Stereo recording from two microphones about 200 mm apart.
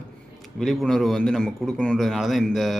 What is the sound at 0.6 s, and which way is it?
Speech, centre (ahead or behind).